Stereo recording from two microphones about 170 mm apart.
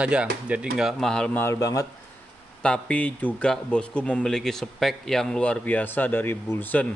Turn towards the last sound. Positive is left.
turn(degrees=10)  # may be behind; listen again after turning